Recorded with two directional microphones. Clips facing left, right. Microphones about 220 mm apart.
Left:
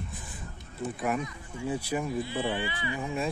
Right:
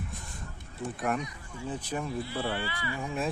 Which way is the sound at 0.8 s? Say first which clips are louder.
Left 1 dB; 5° left (ahead or behind).